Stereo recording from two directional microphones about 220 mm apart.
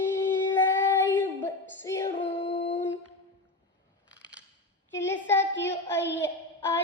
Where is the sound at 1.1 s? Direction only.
10° left (ahead or behind).